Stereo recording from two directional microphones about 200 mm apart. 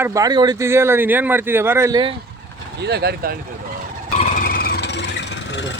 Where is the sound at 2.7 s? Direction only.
55° right (ahead or behind).